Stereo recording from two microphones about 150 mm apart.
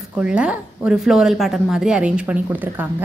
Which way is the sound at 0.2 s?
5° right (ahead or behind).